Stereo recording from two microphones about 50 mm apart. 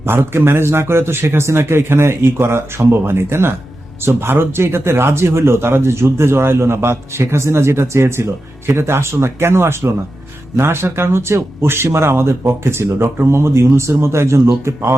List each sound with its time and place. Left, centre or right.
0.0 s speech: right